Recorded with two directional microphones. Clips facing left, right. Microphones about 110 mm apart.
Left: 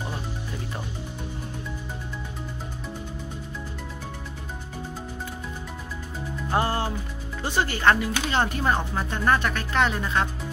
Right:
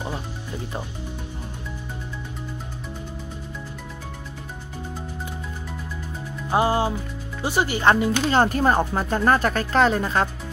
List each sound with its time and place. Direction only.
6.5 s speech: 15° right (ahead or behind)
8.3 s speech: 40° right (ahead or behind)